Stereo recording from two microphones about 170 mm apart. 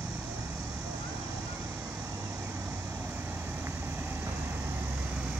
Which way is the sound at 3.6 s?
15° right (ahead or behind).